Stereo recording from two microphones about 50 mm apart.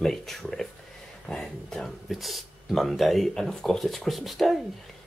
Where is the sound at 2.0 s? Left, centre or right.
Centre.